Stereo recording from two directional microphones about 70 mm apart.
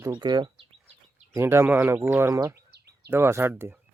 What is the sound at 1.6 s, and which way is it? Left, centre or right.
Speech, right.